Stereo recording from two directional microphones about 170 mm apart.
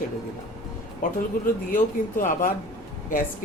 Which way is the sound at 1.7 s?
50° left (ahead or behind).